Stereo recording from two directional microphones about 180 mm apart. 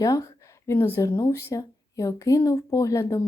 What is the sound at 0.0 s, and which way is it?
A woman's voice, 20° left (ahead or behind).